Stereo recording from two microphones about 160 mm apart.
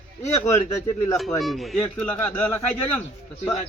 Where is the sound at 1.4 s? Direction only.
Centre (ahead or behind).